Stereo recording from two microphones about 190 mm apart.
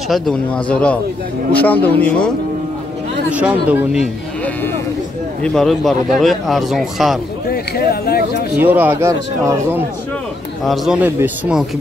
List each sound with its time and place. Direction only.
0.1 s speech: 5° left (ahead or behind)
3.3 s speech: 5° right (ahead or behind)
5.4 s speech: centre (ahead or behind)
7.4 s speech: 55° left (ahead or behind)
8.5 s speech: 10° right (ahead or behind)
10.6 s speech: centre (ahead or behind)